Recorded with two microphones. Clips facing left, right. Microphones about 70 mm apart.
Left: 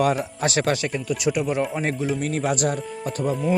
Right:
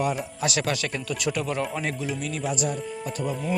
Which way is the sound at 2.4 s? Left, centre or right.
Left.